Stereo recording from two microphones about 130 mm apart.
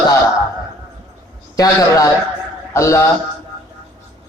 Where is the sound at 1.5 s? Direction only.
25° left (ahead or behind).